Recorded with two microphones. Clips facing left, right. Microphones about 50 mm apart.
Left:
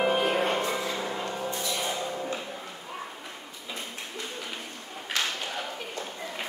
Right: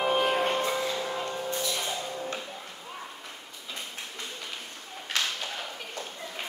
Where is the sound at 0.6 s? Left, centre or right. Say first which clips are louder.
Right 1 dB; left.